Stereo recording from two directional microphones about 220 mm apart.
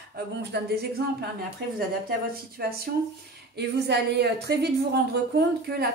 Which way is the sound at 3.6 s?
50° right (ahead or behind).